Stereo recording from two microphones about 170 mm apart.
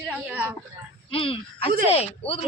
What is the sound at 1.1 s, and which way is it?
Speech, 30° left (ahead or behind).